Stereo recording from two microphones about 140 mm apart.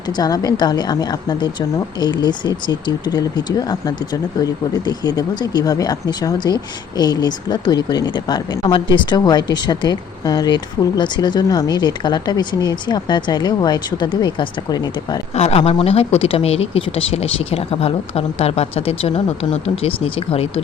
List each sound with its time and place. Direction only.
0.2 s speech: 25° left (ahead or behind)
15.4 s speech: 50° left (ahead or behind)